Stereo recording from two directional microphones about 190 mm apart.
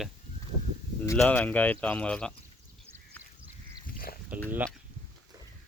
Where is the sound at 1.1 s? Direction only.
10° left (ahead or behind).